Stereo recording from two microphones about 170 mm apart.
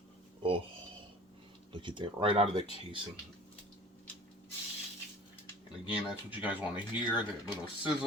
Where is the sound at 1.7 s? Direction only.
30° right (ahead or behind).